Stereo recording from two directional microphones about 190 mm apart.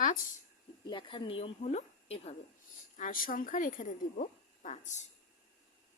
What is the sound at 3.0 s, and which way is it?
Speech, 45° left (ahead or behind).